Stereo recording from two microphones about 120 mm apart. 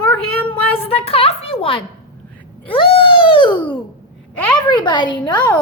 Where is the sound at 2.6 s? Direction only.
45° left (ahead or behind).